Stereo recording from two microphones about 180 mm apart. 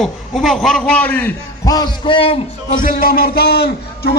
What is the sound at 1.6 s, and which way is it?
Speech, 20° left (ahead or behind).